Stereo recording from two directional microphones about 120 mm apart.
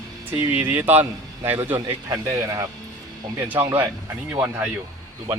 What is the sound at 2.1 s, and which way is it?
Speech, 25° right (ahead or behind).